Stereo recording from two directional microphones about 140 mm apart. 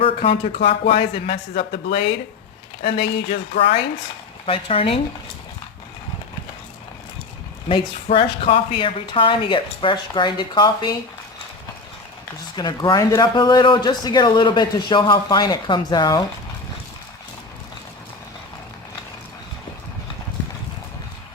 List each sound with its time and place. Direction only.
0.0 s a sound: 40° left (ahead or behind)
0.4 s a woman's voice: 60° left (ahead or behind)
0.9 s speech: 40° left (ahead or behind)
1.5 s speech: 90° left
3.2 s a woman's voice: 55° left (ahead or behind)
4.4 s a man's voice: 40° left (ahead or behind)
7.7 s a man's voice: 40° left (ahead or behind)
12.5 s a man's voice: 30° left (ahead or behind)